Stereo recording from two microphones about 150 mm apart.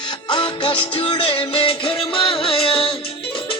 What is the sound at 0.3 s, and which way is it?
Music, 30° left (ahead or behind).